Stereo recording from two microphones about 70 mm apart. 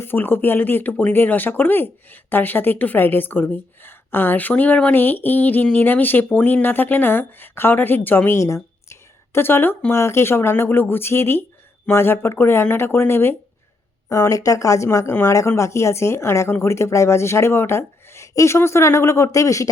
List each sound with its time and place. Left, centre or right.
0.0 s speech: left
8.4 s a sound: left
9.9 s speech: left
14.1 s speech: left
14.8 s speech: left